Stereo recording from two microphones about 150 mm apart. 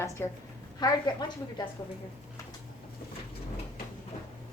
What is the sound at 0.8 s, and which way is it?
Speech, 30° left (ahead or behind).